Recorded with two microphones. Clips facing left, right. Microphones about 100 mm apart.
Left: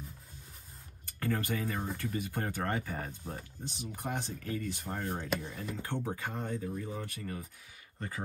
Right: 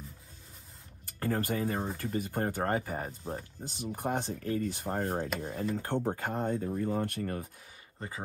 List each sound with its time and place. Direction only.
1.2 s speech: 35° right (ahead or behind); by 7.4 s 55° right (ahead or behind)